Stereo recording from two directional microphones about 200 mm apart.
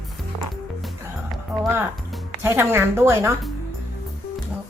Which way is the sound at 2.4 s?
10° right (ahead or behind).